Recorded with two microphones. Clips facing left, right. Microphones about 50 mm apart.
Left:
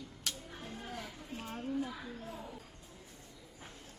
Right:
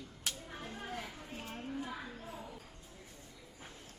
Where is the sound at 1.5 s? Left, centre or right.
Centre.